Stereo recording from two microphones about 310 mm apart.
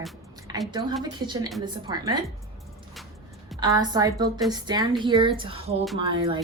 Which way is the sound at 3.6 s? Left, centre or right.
Centre.